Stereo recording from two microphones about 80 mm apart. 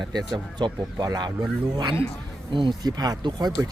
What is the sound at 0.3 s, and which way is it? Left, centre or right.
Speech, right.